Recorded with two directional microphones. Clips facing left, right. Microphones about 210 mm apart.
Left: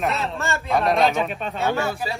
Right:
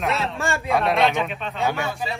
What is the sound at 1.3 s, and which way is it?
Speech, 45° left (ahead or behind).